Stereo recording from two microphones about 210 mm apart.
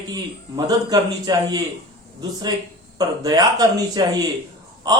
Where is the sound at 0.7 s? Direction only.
20° right (ahead or behind).